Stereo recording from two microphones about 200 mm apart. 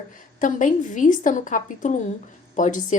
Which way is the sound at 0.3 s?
40° left (ahead or behind).